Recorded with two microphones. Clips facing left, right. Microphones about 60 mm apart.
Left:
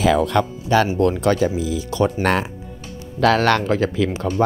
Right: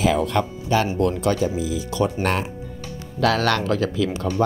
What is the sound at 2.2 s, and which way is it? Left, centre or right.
Speech, left.